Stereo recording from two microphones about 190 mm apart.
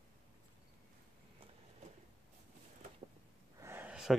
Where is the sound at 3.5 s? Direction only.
10° right (ahead or behind).